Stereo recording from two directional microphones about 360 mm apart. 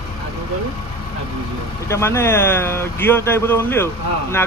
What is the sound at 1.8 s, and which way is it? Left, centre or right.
Speech, centre.